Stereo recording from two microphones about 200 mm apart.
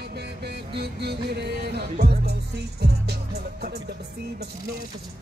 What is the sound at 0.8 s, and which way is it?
Music, 55° right (ahead or behind).